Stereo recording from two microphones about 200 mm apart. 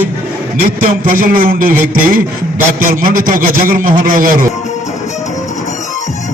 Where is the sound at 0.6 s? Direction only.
45° right (ahead or behind).